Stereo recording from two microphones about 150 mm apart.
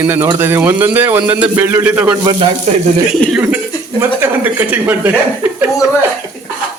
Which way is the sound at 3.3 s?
10° right (ahead or behind).